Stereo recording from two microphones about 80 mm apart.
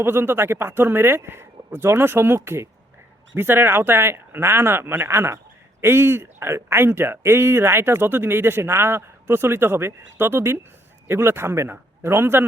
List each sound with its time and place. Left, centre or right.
0.0 s speech: right